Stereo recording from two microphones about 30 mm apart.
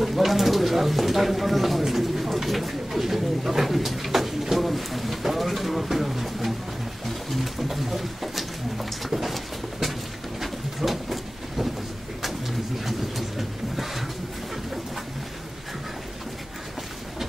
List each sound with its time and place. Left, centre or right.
0.0 s speech: centre
7.1 s pigeon: centre
7.6 s bird: centre
12.2 s pigeon: centre
13.4 s a sound: centre